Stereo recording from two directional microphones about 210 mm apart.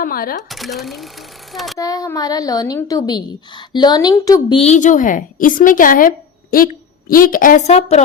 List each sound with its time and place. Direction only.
0.0 s speech: 45° left (ahead or behind)
0.5 s speech: centre (ahead or behind)
1.8 s a woman's voice: 15° left (ahead or behind)